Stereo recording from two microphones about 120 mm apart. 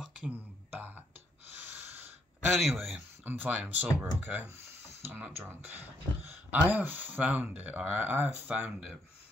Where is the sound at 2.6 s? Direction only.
Centre (ahead or behind).